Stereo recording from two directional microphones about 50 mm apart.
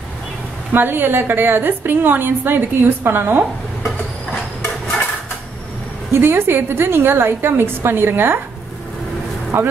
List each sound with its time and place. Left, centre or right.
0.7 s a woman's voice: right
6.1 s a woman's voice: right
9.5 s a woman's voice: right